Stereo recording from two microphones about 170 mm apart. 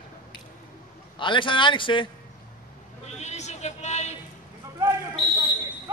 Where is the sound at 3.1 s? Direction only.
40° left (ahead or behind).